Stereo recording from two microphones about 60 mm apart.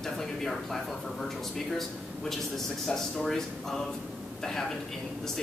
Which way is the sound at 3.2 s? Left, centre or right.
Centre.